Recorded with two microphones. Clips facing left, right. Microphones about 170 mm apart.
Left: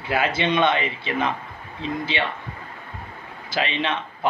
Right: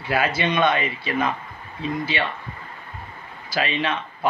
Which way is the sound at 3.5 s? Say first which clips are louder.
Right 1 dB; 20° left (ahead or behind).